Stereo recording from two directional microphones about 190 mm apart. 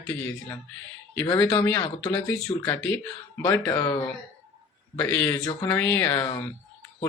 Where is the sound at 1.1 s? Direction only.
15° left (ahead or behind).